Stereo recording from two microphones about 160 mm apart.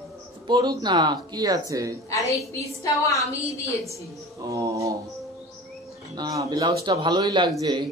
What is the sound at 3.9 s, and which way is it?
A man's voice, 20° right (ahead or behind).